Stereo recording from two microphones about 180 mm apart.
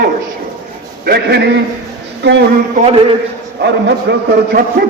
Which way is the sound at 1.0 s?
65° right (ahead or behind).